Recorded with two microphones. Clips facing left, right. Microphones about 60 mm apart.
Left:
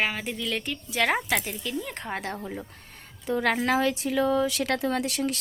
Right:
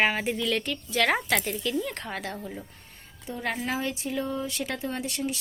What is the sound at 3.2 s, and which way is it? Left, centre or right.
Speech, left.